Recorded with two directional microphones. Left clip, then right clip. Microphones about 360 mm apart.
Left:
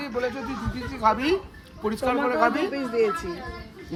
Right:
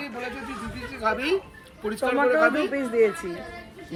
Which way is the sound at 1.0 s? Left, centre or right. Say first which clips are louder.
Left 3 dB; centre.